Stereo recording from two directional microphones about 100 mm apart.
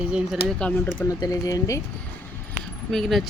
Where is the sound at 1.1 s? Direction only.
35° left (ahead or behind).